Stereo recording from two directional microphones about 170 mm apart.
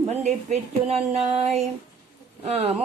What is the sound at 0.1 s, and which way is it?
Speech, 40° right (ahead or behind).